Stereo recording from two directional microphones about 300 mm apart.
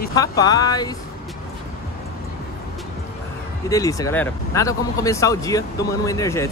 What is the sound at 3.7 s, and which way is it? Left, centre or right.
Speech, centre.